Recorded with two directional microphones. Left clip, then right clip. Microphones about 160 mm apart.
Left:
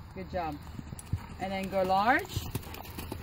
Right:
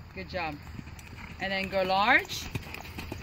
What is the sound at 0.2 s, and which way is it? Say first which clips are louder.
Speech: right 1 dB; 65° left (ahead or behind).